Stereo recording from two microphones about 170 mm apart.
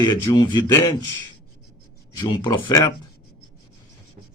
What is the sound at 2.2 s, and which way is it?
Speech, 30° left (ahead or behind).